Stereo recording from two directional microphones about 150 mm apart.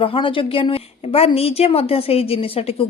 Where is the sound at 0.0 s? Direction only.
35° left (ahead or behind).